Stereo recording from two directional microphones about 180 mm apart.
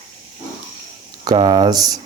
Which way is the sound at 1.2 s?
25° right (ahead or behind).